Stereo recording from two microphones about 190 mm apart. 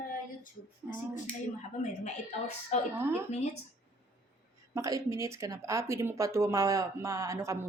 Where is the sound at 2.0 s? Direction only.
35° left (ahead or behind).